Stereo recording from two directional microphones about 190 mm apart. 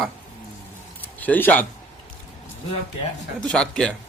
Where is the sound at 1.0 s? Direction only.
10° left (ahead or behind).